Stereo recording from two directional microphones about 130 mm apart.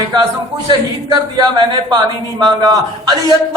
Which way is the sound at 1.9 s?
30° right (ahead or behind).